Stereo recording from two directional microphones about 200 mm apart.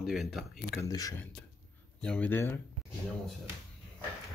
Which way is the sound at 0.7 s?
15° left (ahead or behind).